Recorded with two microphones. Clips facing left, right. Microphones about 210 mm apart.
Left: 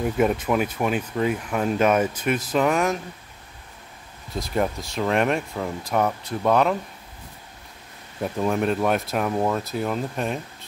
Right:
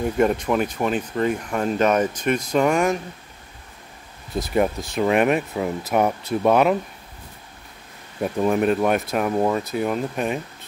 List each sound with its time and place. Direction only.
0.0 s speech: 5° left (ahead or behind)
4.4 s speech: 5° right (ahead or behind)
8.2 s speech: 5° right (ahead or behind)